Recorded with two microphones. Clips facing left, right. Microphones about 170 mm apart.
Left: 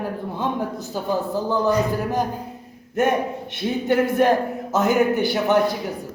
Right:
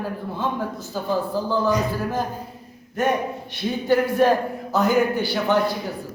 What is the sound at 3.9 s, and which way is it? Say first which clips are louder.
A woman's voice: even; 20° left (ahead or behind).